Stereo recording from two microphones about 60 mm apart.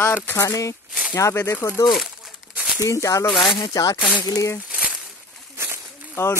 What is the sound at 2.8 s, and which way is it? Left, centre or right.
Speech, left.